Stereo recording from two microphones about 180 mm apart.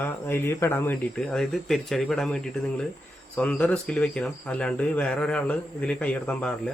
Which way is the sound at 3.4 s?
5° left (ahead or behind).